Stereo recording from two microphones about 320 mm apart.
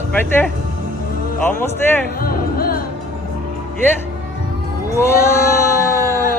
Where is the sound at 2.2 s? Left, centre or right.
Left.